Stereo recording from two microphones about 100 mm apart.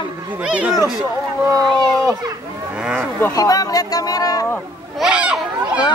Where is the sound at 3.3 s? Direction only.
40° left (ahead or behind).